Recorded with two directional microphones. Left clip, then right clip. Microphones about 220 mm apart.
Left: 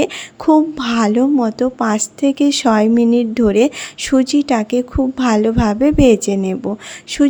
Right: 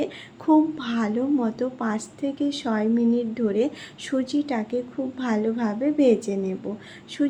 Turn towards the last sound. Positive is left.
turn(degrees=45)  # may be behind; listen again after turning